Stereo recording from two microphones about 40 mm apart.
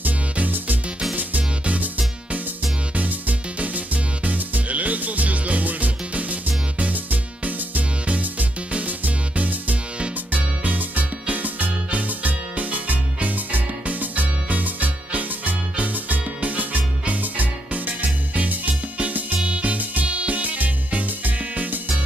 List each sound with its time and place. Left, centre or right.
0.0 s music: right
2.9 s music: right